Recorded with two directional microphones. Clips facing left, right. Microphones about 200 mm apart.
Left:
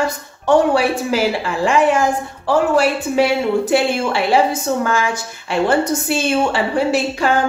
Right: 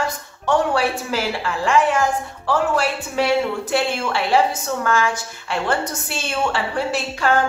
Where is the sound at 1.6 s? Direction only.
10° left (ahead or behind).